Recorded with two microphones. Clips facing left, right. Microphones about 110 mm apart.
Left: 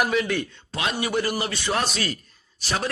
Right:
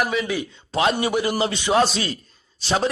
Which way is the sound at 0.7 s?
30° right (ahead or behind).